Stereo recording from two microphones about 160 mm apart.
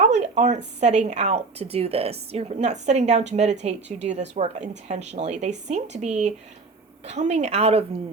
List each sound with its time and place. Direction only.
0.0 s a woman's voice: 45° right (ahead or behind)